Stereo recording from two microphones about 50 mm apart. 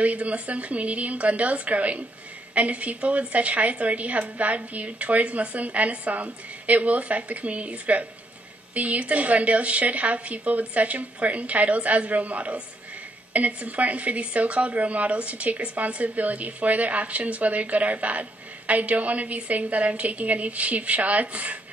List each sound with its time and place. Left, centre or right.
0.0 s a woman's voice: right